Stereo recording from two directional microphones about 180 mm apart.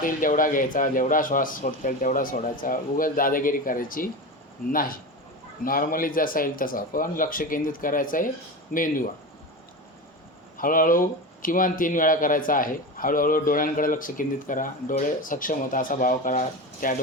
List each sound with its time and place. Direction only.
0.0 s a man's voice: 50° left (ahead or behind)
10.6 s a man's voice: 50° left (ahead or behind)